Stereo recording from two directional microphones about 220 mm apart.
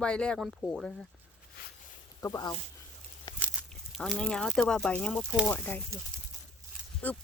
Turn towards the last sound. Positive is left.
turn(degrees=5)  # may be behind; listen again after turning